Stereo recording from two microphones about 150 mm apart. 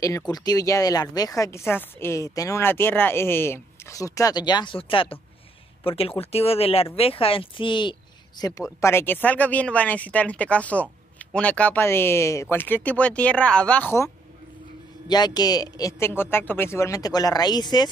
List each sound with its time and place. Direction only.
0.3 s speech: 25° left (ahead or behind)
8.8 s speech: 15° left (ahead or behind)
15.0 s speech: 25° left (ahead or behind)